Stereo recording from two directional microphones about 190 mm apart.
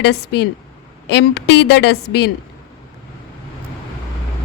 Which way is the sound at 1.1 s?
65° left (ahead or behind).